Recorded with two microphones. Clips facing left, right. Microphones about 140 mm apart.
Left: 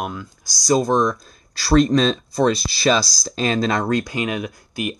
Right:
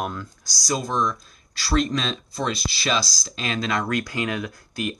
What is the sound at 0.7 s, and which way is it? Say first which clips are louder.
Speech: left 7 dB; 45° left (ahead or behind).